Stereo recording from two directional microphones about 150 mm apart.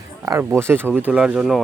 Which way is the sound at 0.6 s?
15° right (ahead or behind).